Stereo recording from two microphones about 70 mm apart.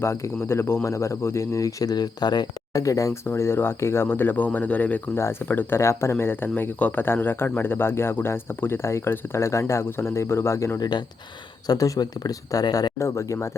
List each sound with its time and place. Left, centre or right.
0.0 s speech: left
2.7 s speech: left
3.2 s speech: left
5.1 s speech: left
10.8 s speech: left
11.6 s speech: left
13.0 s speech: left